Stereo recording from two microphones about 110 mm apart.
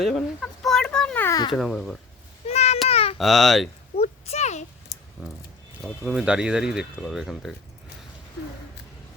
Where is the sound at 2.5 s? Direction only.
80° left.